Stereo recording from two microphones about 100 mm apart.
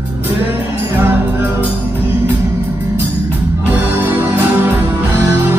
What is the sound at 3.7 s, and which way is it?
Music, 20° right (ahead or behind).